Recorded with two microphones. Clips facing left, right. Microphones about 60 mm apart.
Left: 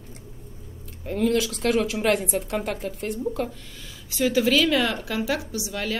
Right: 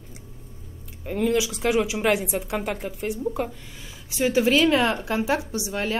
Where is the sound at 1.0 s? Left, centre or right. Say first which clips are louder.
Even; centre.